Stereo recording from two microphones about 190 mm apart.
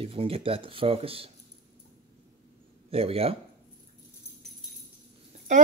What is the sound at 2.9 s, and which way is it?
Speech, 30° right (ahead or behind).